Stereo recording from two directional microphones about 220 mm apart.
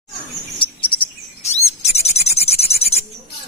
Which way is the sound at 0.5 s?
20° left (ahead or behind).